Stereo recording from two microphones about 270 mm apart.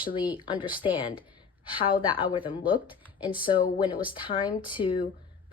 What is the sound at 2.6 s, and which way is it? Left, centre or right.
Speech, centre.